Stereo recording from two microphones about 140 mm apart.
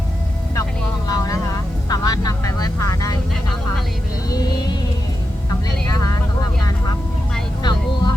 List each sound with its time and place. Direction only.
1.0 s vehicle: 25° left (ahead or behind)
4.3 s vehicle: 30° left (ahead or behind)
7.6 s music: 30° left (ahead or behind)